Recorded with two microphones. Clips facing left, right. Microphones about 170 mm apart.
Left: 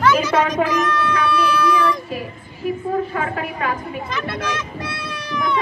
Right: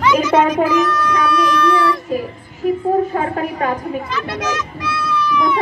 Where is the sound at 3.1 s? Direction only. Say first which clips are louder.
Right 4 dB; 35° right (ahead or behind).